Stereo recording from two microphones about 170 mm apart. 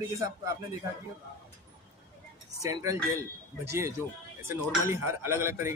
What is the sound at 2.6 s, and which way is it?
Speech, 20° right (ahead or behind).